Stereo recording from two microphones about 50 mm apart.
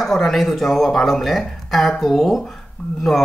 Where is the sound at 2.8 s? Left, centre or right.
Left.